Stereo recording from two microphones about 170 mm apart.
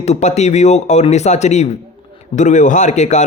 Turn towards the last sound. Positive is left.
turn(degrees=45)  # may be behind; listen again after turning